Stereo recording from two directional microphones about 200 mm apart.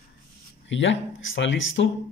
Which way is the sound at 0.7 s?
65° left (ahead or behind).